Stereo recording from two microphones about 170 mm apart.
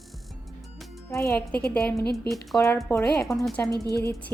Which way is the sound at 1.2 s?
15° left (ahead or behind).